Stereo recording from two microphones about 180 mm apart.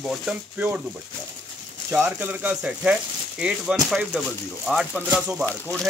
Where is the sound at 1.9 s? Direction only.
10° right (ahead or behind).